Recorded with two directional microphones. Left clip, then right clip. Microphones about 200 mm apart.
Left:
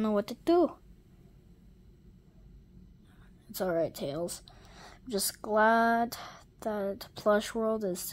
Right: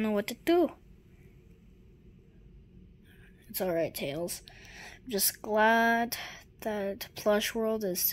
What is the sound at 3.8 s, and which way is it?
Speech, 15° left (ahead or behind).